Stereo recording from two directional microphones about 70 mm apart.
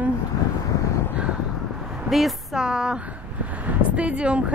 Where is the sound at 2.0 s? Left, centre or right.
Centre.